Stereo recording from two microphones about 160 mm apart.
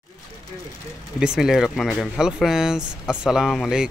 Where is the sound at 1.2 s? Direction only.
5° right (ahead or behind).